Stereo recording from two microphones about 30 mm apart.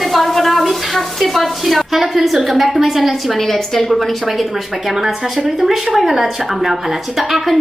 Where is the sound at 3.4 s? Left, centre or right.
Centre.